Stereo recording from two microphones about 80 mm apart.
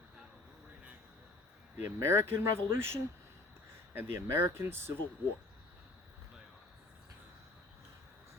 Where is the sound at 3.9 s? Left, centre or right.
Right.